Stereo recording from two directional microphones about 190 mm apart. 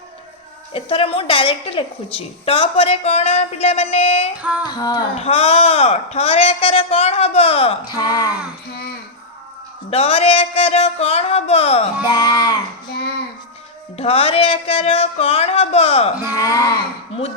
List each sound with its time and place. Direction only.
0.7 s a woman's voice: 30° left (ahead or behind)
4.4 s female singing: 10° right (ahead or behind)
4.7 s speech: 20° left (ahead or behind)
5.1 s a woman's voice: 30° left (ahead or behind)
7.9 s speech: 20° left (ahead or behind)
9.9 s a woman's voice: 30° left (ahead or behind)
12.0 s speech: 20° left (ahead or behind)
13.9 s a woman's voice: 30° left (ahead or behind)
16.3 s speech: 15° left (ahead or behind)